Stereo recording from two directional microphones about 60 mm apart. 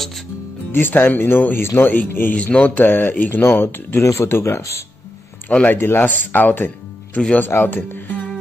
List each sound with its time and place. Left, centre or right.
0.7 s speech: left
2.3 s speech: left
4.0 s speech: left
5.7 s speech: left